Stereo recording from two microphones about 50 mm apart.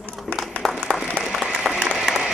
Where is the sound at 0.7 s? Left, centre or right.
Centre.